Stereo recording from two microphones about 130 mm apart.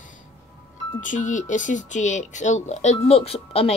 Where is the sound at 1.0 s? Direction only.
75° left (ahead or behind); by 3.7 s 50° left (ahead or behind).